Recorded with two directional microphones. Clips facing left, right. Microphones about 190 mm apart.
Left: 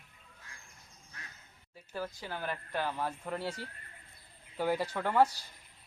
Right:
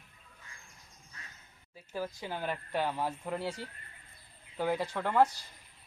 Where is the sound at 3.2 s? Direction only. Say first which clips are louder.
Right 1 dB; 5° right (ahead or behind).